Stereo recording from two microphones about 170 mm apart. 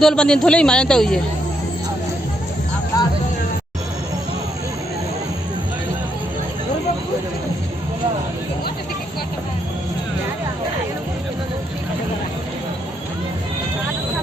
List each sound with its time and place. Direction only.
0.0 s a man's voice: 5° left (ahead or behind)
2.9 s music: 20° left (ahead or behind)